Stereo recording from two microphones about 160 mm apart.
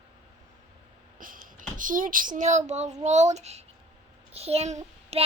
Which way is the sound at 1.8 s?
55° right (ahead or behind).